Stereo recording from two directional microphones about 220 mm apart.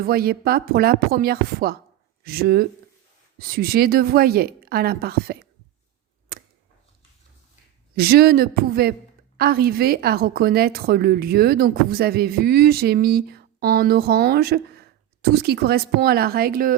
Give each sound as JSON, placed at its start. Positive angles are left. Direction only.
{"t": 0.0, "sound": "a woman's voice", "side_deg": -45}
{"t": 7.9, "sound": "a woman's voice", "side_deg": -45}